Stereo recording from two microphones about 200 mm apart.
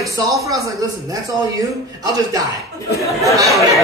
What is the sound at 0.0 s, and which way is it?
Speech, 15° right (ahead or behind).